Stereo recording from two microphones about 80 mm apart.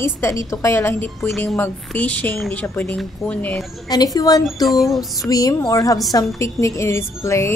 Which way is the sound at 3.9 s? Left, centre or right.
Left.